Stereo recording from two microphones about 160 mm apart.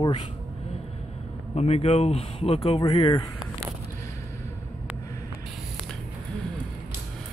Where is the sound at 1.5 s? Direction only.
40° left (ahead or behind).